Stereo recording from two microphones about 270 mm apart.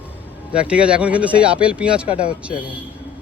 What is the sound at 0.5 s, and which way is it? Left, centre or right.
Speech, centre.